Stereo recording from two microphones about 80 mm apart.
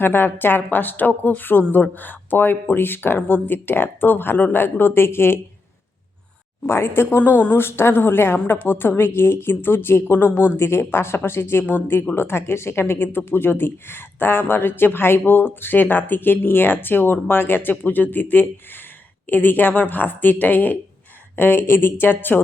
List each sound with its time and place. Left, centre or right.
0.0 s speech: left
6.7 s speech: left
10.2 s speech: centre
10.6 s speech: left